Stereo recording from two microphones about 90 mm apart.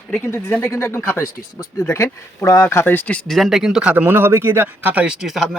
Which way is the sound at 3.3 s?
Centre (ahead or behind).